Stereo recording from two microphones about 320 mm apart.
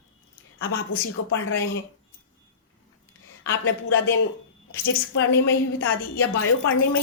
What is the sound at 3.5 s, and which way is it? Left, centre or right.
A woman's voice, left.